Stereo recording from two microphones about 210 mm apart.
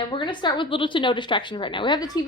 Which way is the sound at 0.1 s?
20° left (ahead or behind).